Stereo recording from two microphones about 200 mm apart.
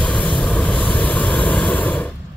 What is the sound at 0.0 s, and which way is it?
Vehicle, 5° left (ahead or behind).